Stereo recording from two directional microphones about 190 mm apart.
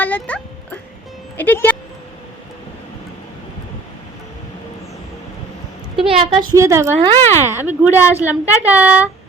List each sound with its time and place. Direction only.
0.0 s music: 10° left (ahead or behind)
1.4 s speech: 10° left (ahead or behind)
6.1 s a woman's voice: 30° right (ahead or behind)
6.5 s speech: 15° right (ahead or behind)